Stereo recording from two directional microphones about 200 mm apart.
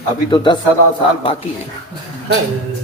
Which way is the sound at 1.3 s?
30° left (ahead or behind).